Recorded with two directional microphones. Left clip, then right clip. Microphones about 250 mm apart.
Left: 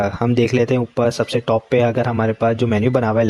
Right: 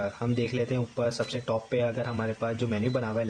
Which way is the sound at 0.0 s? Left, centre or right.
Left.